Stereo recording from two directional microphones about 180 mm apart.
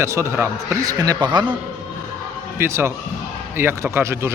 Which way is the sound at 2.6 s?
15° right (ahead or behind).